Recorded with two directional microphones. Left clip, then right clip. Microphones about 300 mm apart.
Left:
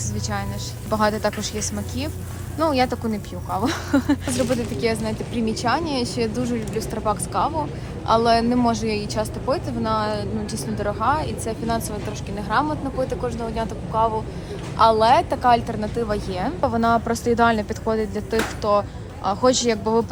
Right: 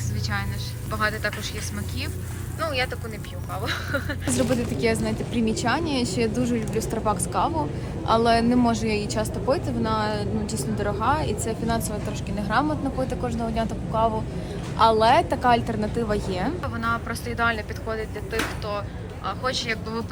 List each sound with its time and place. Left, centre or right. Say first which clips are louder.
0.9 s speech: left 5 dB; centre
3.7 s speech: left 4 dB; centre
4.3 s a woman's voice: left 1 dB; centre
16.8 s speech: left 6 dB; left